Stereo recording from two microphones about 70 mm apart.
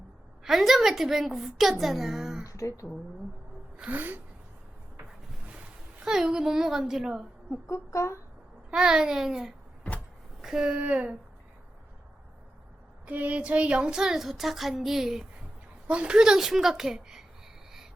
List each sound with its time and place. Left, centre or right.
0.4 s a woman's voice: centre
2.5 s speech: left
3.8 s a sound: right
6.1 s speech: centre
7.5 s speech: left
8.7 s speech: centre
13.1 s speech: right; by 15.3 s centre
15.9 s speech: centre